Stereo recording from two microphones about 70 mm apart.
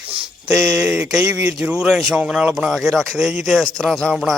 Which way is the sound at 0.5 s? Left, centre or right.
Right.